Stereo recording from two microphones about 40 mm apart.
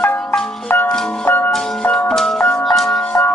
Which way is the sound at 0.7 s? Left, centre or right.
Left.